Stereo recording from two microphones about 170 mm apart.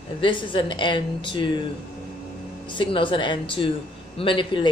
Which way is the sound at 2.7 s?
30° left (ahead or behind).